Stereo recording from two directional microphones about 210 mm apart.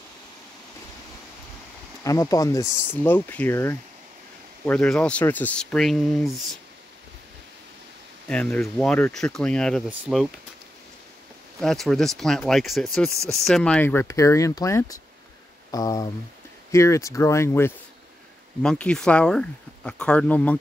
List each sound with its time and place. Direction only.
2.0 s speech: 15° left (ahead or behind); by 6.6 s centre (ahead or behind)
8.3 s speech: 5° left (ahead or behind)
11.6 s speech: centre (ahead or behind)